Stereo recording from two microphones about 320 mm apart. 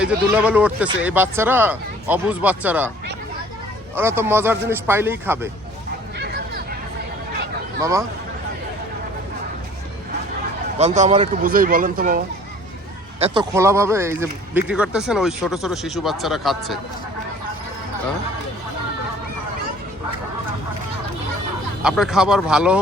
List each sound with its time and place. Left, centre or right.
0.0 s speech: centre
3.9 s a man's voice: centre
6.1 s a sound: right
7.8 s speech: centre
10.8 s speech: right; by 16.7 s centre
21.8 s speech: centre